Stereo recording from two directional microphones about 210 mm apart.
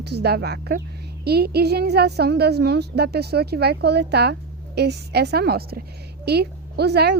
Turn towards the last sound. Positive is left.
turn(degrees=-50)  # may be behind; listen again after turning